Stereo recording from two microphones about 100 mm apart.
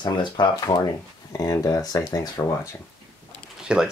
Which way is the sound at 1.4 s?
35° left (ahead or behind).